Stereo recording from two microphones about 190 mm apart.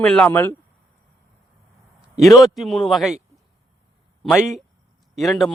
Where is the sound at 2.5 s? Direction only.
Centre (ahead or behind).